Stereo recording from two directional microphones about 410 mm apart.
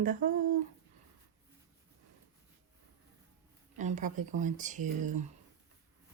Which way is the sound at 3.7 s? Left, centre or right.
Centre.